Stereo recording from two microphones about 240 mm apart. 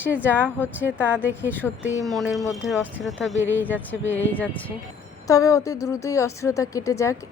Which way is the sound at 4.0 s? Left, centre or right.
Left.